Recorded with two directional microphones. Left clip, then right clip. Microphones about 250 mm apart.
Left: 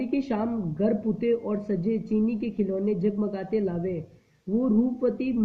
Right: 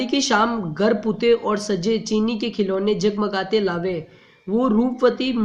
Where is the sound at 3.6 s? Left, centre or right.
Right.